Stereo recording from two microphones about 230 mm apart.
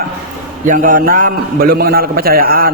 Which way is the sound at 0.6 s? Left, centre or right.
Right.